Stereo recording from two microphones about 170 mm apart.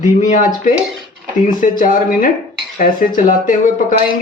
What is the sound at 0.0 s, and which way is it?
Speech, 45° left (ahead or behind).